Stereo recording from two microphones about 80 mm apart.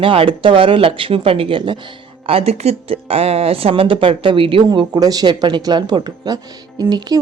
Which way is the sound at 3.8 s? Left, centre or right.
Right.